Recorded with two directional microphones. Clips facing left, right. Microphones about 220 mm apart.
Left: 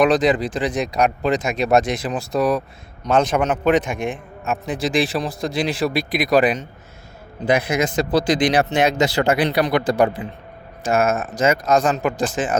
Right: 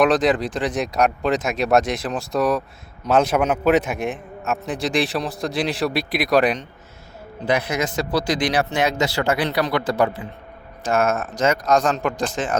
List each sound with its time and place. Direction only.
0.0 s speech: centre (ahead or behind)
7.4 s speech: 10° left (ahead or behind)